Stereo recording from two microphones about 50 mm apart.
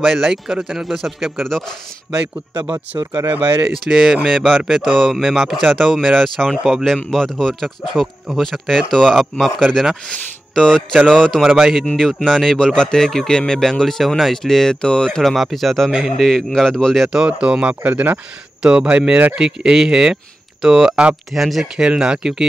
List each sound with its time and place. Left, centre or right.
0.0 s speech: centre
2.7 s speech: right
3.9 s speech: centre
4.3 s speech: centre
7.1 s speech: centre
10.0 s speech: centre
11.4 s speech: centre
11.8 s speech: centre
15.3 s speech: centre
17.3 s speech: centre
18.6 s speech: centre
20.6 s speech: centre
21.8 s speech: centre